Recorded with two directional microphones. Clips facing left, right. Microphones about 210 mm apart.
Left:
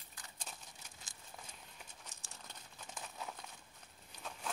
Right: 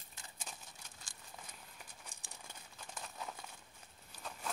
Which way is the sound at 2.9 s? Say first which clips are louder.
Even; centre (ahead or behind).